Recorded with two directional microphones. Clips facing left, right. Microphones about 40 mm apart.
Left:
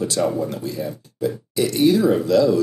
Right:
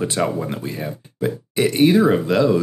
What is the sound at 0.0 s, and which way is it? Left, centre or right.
Speech, right.